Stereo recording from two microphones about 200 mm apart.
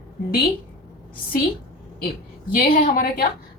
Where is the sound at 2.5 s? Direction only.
45° left (ahead or behind).